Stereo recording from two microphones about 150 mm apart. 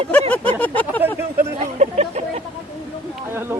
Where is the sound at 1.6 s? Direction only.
50° right (ahead or behind).